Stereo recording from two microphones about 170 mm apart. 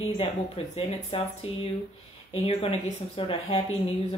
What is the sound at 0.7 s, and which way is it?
Speech, 35° left (ahead or behind).